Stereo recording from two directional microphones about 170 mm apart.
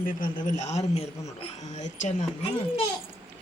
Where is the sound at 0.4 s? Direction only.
45° left (ahead or behind).